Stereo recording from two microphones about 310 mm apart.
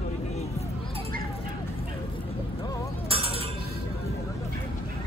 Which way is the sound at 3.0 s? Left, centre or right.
Centre.